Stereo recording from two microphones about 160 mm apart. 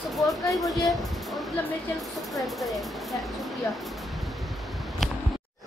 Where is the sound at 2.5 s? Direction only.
Centre (ahead or behind).